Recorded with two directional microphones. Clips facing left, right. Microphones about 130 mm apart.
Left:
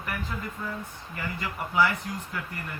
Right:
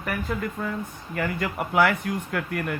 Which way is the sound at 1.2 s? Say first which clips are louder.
Right 7 dB; 60° right (ahead or behind).